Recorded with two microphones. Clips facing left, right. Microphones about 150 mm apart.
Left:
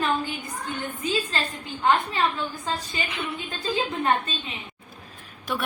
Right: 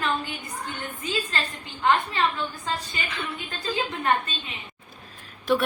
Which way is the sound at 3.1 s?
15° left (ahead or behind).